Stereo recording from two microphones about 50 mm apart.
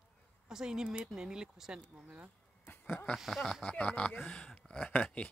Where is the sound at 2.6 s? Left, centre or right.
Left.